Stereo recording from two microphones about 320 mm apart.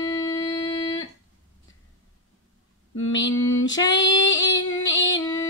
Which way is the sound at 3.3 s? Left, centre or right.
Left.